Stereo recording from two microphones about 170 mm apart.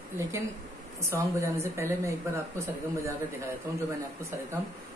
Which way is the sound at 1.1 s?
15° right (ahead or behind).